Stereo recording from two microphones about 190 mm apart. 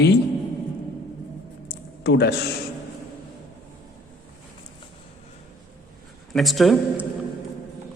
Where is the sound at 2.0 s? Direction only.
60° left (ahead or behind).